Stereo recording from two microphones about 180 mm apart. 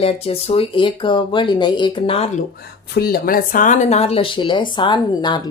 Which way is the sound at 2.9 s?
60° left (ahead or behind).